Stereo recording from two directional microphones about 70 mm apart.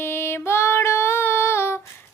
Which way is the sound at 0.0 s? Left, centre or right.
Left.